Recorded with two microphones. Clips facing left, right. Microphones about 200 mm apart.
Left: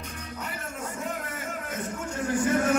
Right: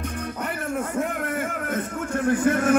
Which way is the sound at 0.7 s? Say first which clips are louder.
Right 7 dB; 60° right (ahead or behind).